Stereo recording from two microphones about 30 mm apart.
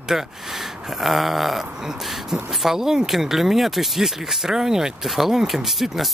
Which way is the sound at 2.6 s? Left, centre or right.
Centre.